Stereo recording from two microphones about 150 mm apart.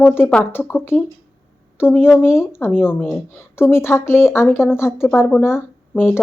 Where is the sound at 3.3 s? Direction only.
15° left (ahead or behind).